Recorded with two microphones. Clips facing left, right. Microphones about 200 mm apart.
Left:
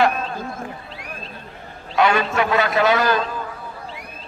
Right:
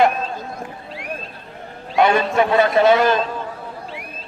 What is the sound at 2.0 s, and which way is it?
A man's voice, 25° right (ahead or behind).